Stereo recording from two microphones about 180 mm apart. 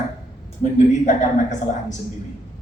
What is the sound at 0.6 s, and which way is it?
A woman's voice, 40° left (ahead or behind).